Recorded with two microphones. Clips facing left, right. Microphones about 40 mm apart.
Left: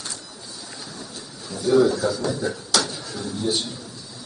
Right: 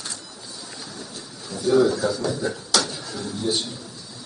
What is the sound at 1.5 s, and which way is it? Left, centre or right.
A man's voice, centre.